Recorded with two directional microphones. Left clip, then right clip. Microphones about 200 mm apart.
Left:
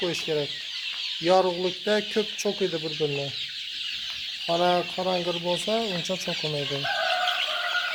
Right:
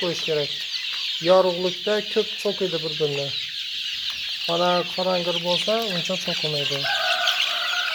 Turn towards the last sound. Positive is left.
turn(degrees=15)  # may be behind; listen again after turning